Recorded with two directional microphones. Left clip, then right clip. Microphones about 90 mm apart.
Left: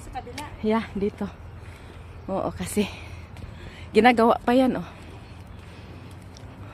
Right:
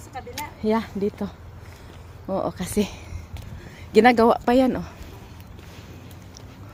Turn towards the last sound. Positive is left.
turn(degrees=-15)  # may be behind; listen again after turning